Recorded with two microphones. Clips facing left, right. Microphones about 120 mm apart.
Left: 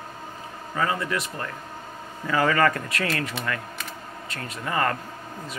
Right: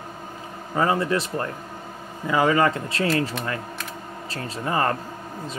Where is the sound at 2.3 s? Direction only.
20° right (ahead or behind).